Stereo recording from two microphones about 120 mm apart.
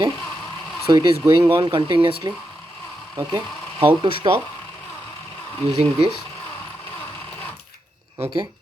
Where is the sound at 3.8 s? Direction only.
50° right (ahead or behind).